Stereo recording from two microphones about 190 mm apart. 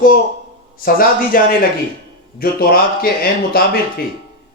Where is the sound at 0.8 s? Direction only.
50° left (ahead or behind).